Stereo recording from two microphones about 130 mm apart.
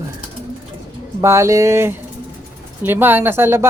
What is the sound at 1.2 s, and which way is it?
Speech, 20° right (ahead or behind).